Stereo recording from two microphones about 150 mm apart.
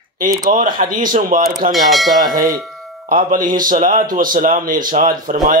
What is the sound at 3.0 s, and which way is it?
Speech, 65° right (ahead or behind).